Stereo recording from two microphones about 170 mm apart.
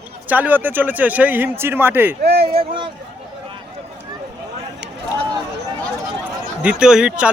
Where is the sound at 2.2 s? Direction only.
70° right (ahead or behind).